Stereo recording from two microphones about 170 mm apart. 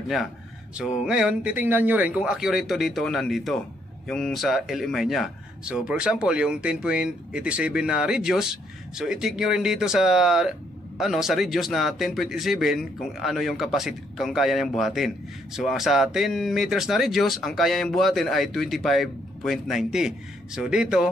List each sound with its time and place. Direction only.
0.7 s speech: 5° right (ahead or behind)